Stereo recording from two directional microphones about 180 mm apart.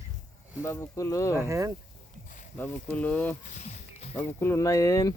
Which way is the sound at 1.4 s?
15° right (ahead or behind).